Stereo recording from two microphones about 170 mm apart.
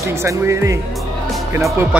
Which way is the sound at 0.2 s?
15° right (ahead or behind).